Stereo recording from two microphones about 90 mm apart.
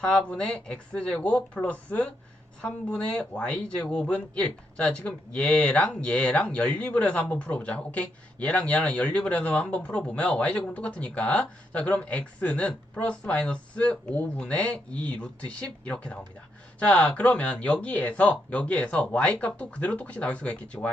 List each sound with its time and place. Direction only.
0.0 s speech: 10° left (ahead or behind)